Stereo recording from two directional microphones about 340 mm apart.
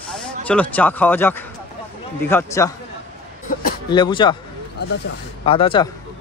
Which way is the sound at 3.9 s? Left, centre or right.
Centre.